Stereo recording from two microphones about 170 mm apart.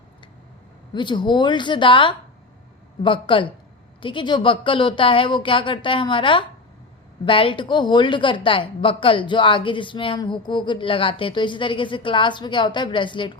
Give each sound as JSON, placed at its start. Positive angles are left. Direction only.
{"t": 0.9, "sound": "a woman's voice", "side_deg": 25}